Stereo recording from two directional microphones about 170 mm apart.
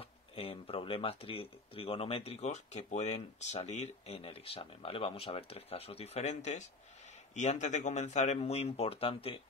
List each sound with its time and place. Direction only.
0.0 s speech: 35° left (ahead or behind)